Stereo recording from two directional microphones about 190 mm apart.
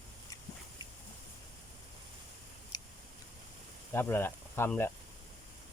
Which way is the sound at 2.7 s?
20° left (ahead or behind).